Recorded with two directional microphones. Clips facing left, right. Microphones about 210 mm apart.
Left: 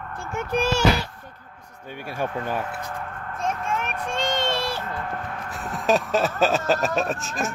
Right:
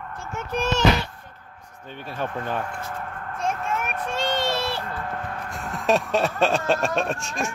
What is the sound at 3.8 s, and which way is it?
Child singing, 10° right (ahead or behind).